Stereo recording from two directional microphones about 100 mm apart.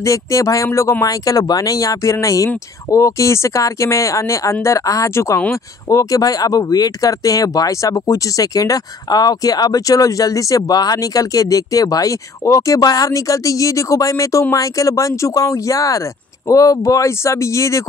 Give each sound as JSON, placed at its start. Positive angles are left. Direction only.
{"t": 0.0, "sound": "speech", "side_deg": 30}